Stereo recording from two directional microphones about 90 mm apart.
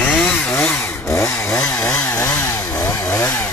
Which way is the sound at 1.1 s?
35° left (ahead or behind).